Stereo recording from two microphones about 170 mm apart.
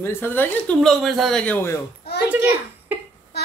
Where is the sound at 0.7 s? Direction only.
Centre (ahead or behind).